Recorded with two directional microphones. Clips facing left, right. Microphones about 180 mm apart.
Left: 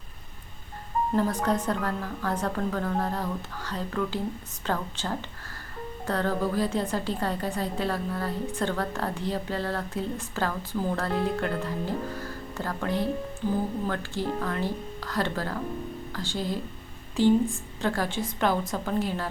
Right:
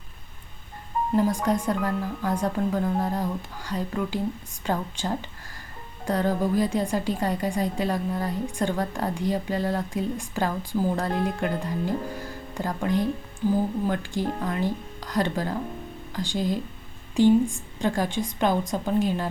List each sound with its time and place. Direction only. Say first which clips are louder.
1.1 s a woman's voice: right 3 dB; 10° right (ahead or behind)